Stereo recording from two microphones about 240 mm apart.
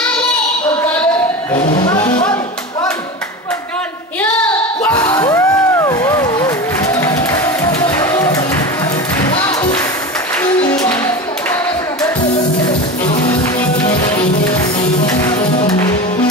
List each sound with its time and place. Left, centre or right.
1.8 s speech: centre
4.9 s music: centre